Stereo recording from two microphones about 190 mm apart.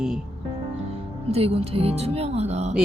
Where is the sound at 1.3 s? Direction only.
30° right (ahead or behind).